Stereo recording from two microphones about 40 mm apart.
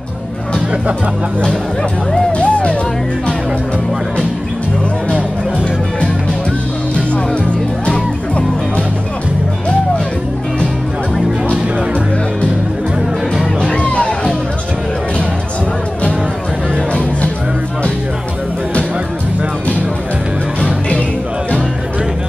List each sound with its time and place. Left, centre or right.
2.3 s music: left
7.8 s music: left
13.6 s music: left